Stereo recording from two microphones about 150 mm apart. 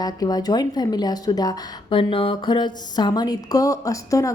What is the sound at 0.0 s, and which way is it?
A woman's voice, 25° left (ahead or behind).